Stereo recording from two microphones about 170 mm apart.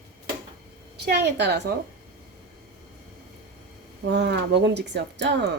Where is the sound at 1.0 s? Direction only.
80° right.